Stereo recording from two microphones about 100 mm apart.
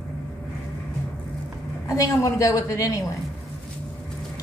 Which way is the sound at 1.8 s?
35° left (ahead or behind).